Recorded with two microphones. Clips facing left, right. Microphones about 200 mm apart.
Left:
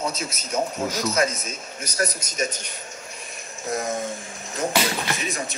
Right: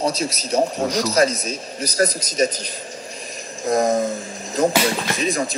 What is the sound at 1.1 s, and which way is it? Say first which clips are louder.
A man's voice: right 6 dB; 35° right (ahead or behind).